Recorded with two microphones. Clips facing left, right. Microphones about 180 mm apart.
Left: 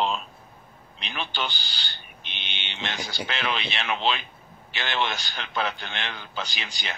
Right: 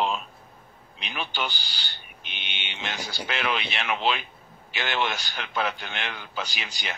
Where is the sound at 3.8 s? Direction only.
5° right (ahead or behind).